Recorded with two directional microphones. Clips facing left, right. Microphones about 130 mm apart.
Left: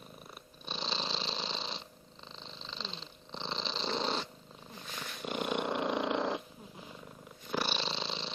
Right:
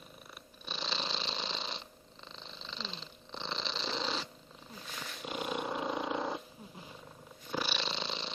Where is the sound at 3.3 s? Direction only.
30° left (ahead or behind).